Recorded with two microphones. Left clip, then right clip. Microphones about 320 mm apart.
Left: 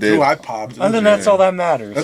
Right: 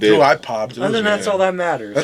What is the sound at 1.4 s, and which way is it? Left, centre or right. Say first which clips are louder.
Speech: left 3 dB; left.